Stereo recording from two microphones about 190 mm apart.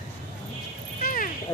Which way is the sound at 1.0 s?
45° left (ahead or behind).